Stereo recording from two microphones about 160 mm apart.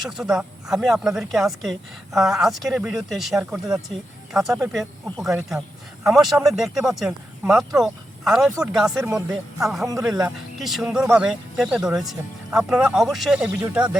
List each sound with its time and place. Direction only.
0.0 s speech: centre (ahead or behind)
9.0 s speech: 15° right (ahead or behind)
9.6 s speech: centre (ahead or behind)